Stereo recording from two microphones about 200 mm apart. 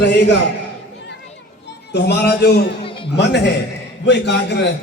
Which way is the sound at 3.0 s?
55° left (ahead or behind).